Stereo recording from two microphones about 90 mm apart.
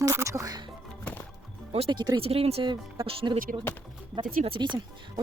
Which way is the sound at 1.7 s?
90° right.